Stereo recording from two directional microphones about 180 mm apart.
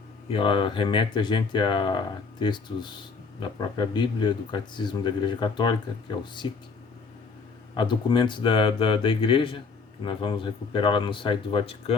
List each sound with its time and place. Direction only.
0.3 s speech: 30° left (ahead or behind)
7.8 s speech: 25° left (ahead or behind)